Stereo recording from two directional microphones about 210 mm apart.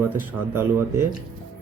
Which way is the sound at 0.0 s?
10° right (ahead or behind).